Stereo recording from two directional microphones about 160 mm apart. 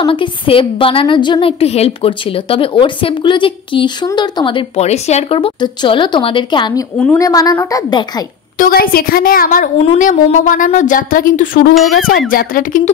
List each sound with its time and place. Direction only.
0.0 s a woman's voice: 35° left (ahead or behind)
8.5 s speech: 65° left (ahead or behind)